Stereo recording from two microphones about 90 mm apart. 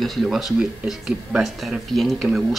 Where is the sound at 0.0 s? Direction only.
Centre (ahead or behind).